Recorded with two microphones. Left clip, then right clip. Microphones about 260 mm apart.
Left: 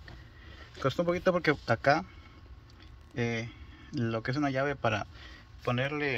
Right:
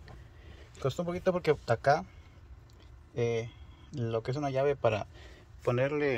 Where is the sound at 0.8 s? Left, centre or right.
Centre.